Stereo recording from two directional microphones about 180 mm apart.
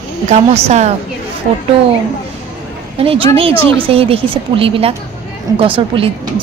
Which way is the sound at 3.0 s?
30° right (ahead or behind).